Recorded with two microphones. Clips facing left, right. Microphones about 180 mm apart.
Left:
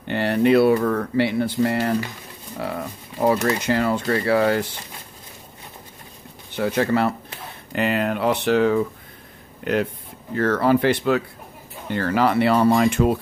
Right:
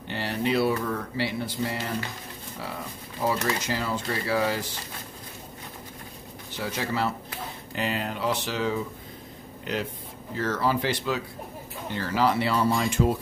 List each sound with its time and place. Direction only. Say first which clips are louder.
0.1 s speech: left 9 dB; 60° left (ahead or behind)
6.5 s speech: left 10 dB; 60° left (ahead or behind)